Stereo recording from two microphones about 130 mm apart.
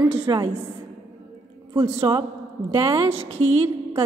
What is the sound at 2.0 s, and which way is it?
A woman's voice, 40° right (ahead or behind).